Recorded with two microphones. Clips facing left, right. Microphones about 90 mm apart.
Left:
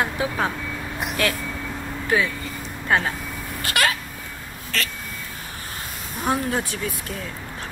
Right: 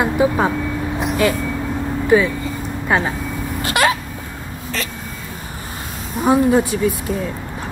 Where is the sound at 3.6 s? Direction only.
25° right (ahead or behind).